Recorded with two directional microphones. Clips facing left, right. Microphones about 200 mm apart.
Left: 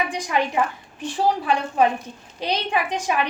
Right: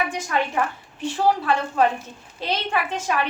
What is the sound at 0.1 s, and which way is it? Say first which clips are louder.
A woman's voice: left 1 dB; 15° left (ahead or behind).